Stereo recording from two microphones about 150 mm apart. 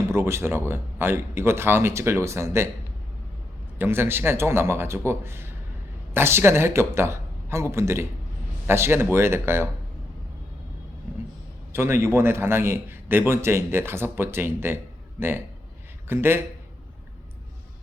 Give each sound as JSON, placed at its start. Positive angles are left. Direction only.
{"t": 0.1, "sound": "a man's voice", "side_deg": -15}
{"t": 3.8, "sound": "a man's voice", "side_deg": -15}
{"t": 11.7, "sound": "a man's voice", "side_deg": -15}
{"t": 16.0, "sound": "a man's voice", "side_deg": -15}